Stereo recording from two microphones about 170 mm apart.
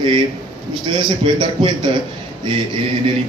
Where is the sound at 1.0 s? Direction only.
25° right (ahead or behind).